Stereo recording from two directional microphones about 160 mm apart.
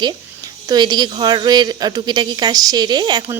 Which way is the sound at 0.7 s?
25° right (ahead or behind).